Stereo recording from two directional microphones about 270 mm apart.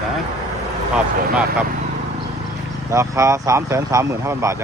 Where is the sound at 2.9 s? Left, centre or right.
Centre.